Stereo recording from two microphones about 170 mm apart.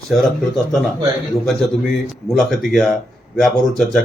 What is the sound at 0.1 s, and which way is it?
Speech, centre (ahead or behind).